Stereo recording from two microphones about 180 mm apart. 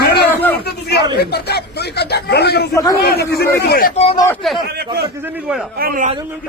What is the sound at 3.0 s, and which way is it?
Speech, 60° left (ahead or behind).